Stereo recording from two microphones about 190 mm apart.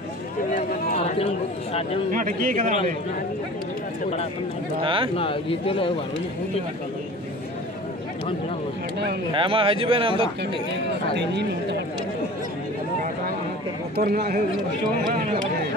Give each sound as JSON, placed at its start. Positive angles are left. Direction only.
{"t": 0.6, "sound": "run", "side_deg": 50}
{"t": 0.9, "sound": "a man's voice", "side_deg": 30}
{"t": 2.1, "sound": "a man's voice", "side_deg": -45}
{"t": 4.8, "sound": "speech", "side_deg": -25}
{"t": 5.1, "sound": "speech", "side_deg": 30}
{"t": 9.3, "sound": "speech", "side_deg": -30}
{"t": 11.1, "sound": "speech", "side_deg": -65}
{"t": 13.9, "sound": "a man's voice", "side_deg": -55}